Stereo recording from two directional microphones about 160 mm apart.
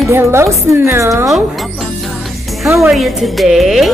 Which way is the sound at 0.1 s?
15° right (ahead or behind).